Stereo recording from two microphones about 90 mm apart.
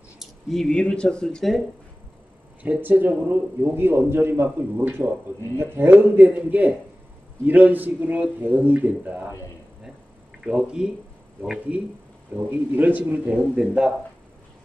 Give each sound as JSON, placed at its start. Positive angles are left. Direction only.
{"t": 0.2, "sound": "speech", "side_deg": 5}
{"t": 2.6, "sound": "a man's voice", "side_deg": -20}
{"t": 10.4, "sound": "a man's voice", "side_deg": -10}
{"t": 12.4, "sound": "a man's voice", "side_deg": -20}